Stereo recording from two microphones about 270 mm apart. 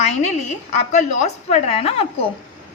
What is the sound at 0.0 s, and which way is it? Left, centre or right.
A woman's voice, left.